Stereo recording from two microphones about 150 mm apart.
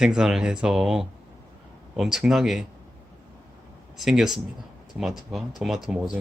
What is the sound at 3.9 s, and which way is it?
Speech, 5° right (ahead or behind).